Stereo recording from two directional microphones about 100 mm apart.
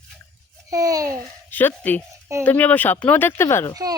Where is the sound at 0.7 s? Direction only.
35° right (ahead or behind).